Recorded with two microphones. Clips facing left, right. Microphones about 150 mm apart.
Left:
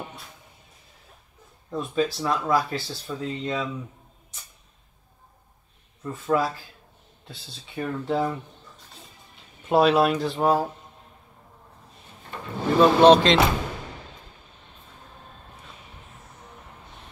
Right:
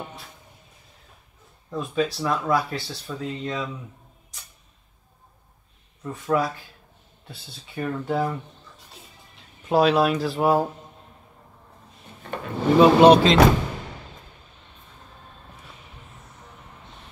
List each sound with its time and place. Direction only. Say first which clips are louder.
1.7 s speech: even; centre (ahead or behind)
6.1 s speech: even; centre (ahead or behind)
9.7 s speech: even; centre (ahead or behind)
12.7 s speech: right 2 dB; 10° right (ahead or behind)